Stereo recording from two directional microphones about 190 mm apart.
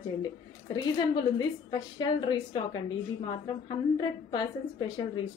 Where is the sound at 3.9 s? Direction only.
25° left (ahead or behind).